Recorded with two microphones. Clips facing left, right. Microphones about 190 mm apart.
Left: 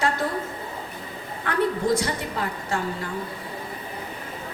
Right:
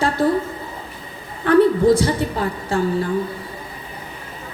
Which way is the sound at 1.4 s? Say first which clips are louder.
Right 10 dB; 30° right (ahead or behind).